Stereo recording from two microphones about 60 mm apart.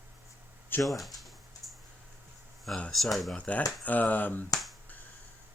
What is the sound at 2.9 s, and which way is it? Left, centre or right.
Speech, centre.